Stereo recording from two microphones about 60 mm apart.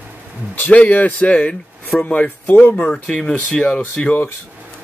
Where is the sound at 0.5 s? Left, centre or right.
Left.